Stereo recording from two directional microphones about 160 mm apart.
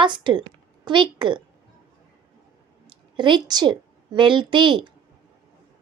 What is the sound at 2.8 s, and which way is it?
A woman's voice, 30° right (ahead or behind).